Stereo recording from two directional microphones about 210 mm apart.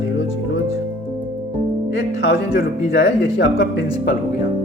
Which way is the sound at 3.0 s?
55° left (ahead or behind).